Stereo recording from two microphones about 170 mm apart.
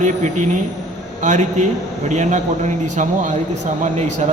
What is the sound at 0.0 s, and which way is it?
A man's voice, 50° right (ahead or behind).